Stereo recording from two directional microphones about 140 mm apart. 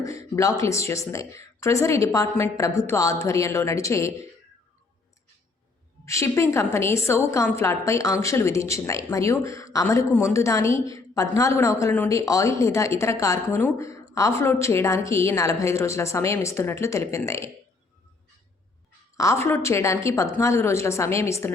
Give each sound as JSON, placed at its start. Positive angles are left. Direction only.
{"t": 0.0, "sound": "a woman's voice", "side_deg": 20}
{"t": 6.1, "sound": "a woman's voice", "side_deg": 20}
{"t": 19.1, "sound": "a woman's voice", "side_deg": 20}